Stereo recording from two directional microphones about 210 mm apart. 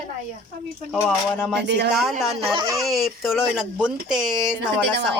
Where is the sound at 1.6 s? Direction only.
55° right (ahead or behind).